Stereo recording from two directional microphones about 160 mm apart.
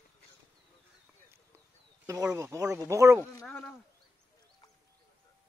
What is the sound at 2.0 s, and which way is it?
Speech, 20° right (ahead or behind).